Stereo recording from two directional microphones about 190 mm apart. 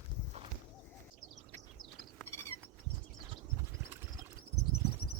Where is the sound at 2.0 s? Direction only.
Centre (ahead or behind).